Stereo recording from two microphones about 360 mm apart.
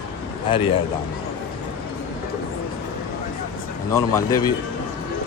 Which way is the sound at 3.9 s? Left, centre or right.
Centre.